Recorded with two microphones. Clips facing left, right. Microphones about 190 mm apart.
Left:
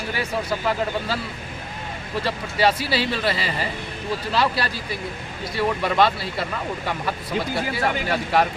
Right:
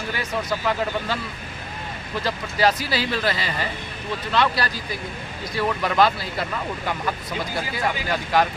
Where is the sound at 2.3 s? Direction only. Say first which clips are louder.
Even; 5° left (ahead or behind).